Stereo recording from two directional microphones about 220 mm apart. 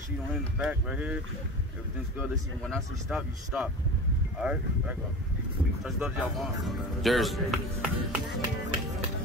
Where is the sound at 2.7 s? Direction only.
5° right (ahead or behind).